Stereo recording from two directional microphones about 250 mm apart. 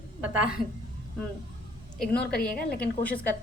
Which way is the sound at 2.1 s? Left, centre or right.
Left.